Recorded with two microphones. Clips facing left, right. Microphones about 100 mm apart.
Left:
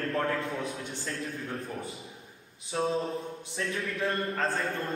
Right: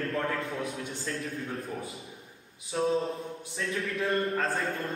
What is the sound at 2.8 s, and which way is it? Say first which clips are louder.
A man's voice: right 1 dB; centre (ahead or behind).